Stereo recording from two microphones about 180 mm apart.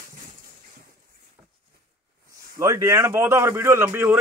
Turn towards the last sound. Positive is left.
turn(degrees=-10)  # may be behind; listen again after turning